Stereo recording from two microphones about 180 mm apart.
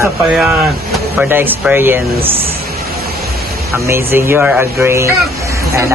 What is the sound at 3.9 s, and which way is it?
Speech, 15° right (ahead or behind).